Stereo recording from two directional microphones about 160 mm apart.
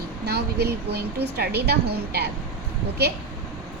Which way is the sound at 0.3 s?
90° right.